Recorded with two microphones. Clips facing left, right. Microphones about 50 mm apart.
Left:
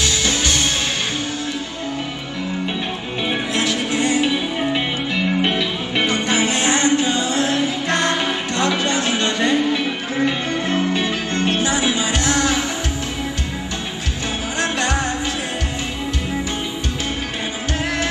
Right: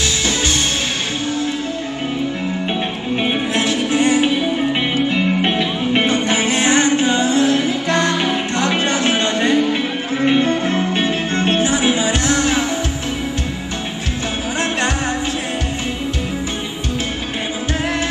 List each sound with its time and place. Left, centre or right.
0.0 s music: right
3.5 s music: right
8.6 s music: right